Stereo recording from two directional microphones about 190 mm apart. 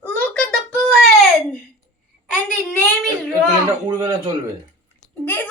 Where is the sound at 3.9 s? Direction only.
20° right (ahead or behind).